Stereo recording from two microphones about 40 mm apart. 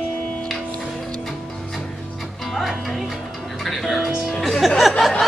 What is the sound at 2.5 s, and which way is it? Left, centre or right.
Music, centre.